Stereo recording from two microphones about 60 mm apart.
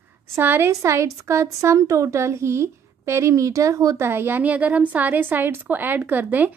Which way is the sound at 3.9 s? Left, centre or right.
Right.